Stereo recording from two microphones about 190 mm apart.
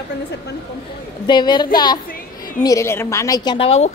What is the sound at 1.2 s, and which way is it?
A woman's voice, 25° left (ahead or behind).